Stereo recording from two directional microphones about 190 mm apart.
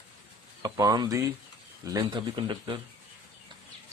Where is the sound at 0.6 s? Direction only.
20° right (ahead or behind).